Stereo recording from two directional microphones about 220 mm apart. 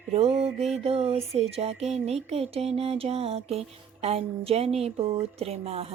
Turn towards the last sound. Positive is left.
turn(degrees=-30)  # may be behind; listen again after turning